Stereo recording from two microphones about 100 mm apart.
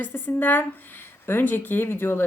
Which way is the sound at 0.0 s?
20° left (ahead or behind).